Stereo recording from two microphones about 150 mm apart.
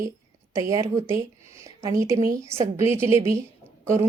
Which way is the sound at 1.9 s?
20° right (ahead or behind).